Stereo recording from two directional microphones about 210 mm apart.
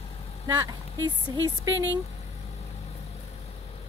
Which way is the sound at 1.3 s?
15° right (ahead or behind).